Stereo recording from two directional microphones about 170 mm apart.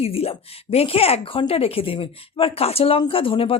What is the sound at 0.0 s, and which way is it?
Speech, 35° left (ahead or behind).